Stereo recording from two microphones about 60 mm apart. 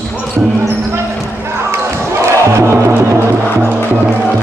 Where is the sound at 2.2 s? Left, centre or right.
Right.